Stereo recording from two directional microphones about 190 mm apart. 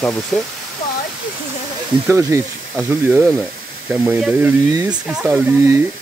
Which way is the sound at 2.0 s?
15° right (ahead or behind).